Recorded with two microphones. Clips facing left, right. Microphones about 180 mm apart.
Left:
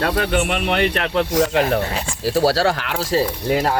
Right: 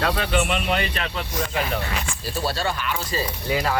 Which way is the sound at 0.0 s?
55° left (ahead or behind).